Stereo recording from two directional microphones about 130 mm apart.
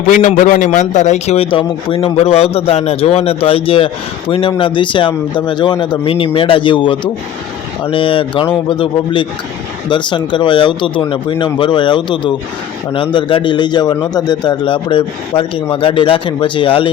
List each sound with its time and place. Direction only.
0.1 s a man's voice: 80° left; by 1.5 s 60° left (ahead or behind)
1.5 s a man's voice: 40° left (ahead or behind)